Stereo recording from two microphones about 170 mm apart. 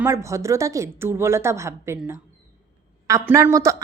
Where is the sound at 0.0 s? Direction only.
15° right (ahead or behind).